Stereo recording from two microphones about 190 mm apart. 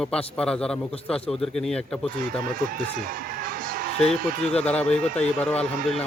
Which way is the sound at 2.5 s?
50° right (ahead or behind).